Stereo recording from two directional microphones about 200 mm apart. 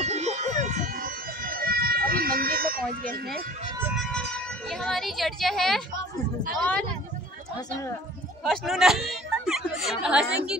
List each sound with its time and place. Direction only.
0.0 s siren: 35° right (ahead or behind)
0.7 s emergency vehicle: 40° right (ahead or behind)
3.9 s siren: centre (ahead or behind)
4.6 s speech: centre (ahead or behind)
8.5 s speech: centre (ahead or behind)